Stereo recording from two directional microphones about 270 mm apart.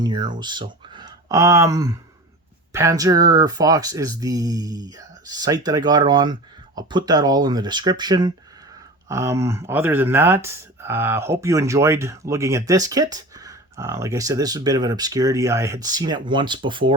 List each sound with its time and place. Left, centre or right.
0.0 s speech: centre